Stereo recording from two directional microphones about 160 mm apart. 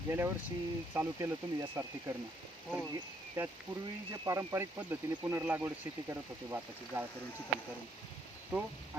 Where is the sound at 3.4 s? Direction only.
15° right (ahead or behind).